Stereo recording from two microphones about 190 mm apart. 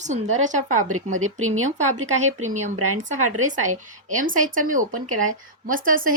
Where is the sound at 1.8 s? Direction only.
40° right (ahead or behind).